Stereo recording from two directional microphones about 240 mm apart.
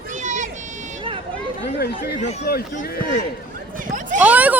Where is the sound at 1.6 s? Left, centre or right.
Left.